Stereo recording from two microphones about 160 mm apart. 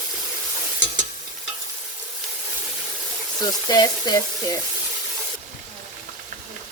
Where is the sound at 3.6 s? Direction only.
25° left (ahead or behind).